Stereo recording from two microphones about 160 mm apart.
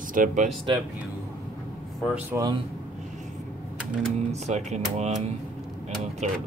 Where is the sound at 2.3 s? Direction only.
25° right (ahead or behind).